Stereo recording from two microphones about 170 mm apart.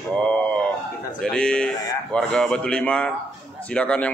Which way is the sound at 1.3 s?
5° left (ahead or behind).